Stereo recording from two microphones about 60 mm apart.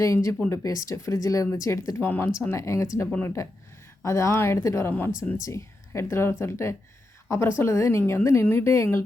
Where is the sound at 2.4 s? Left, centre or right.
Left.